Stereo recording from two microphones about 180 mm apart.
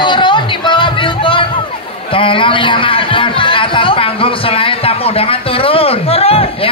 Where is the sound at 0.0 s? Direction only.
25° left (ahead or behind).